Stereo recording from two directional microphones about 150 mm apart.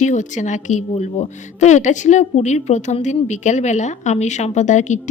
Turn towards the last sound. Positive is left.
turn(degrees=55)  # may be behind; listen again after turning